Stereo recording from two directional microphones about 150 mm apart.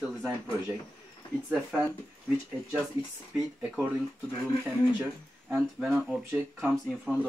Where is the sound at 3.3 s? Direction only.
5° right (ahead or behind).